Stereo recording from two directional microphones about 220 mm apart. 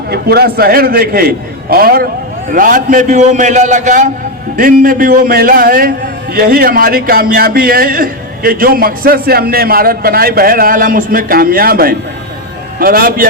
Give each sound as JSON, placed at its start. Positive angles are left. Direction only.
{"t": 0.1, "sound": "a man's voice", "side_deg": -45}